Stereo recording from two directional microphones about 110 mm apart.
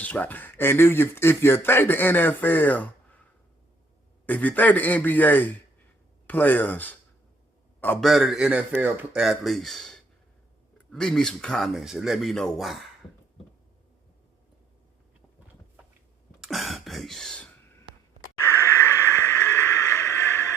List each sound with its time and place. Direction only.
0.0 s speech: 15° left (ahead or behind)
4.3 s speech: 15° left (ahead or behind)
8.0 s speech: centre (ahead or behind)
9.2 s speech: centre (ahead or behind)
16.4 s throat clearing: centre (ahead or behind)
18.3 s a sound: 25° left (ahead or behind)